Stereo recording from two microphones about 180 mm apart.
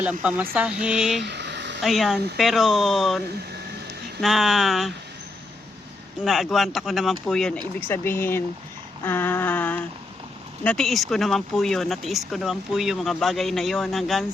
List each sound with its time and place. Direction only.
0.0 s speech: 5° right (ahead or behind)
1.2 s a sound: 70° right (ahead or behind)
1.8 s speech: centre (ahead or behind)
4.2 s speech: centre (ahead or behind)
6.2 s speech: centre (ahead or behind)
7.9 s a sound: 15° left (ahead or behind)
10.6 s speech: 5° left (ahead or behind)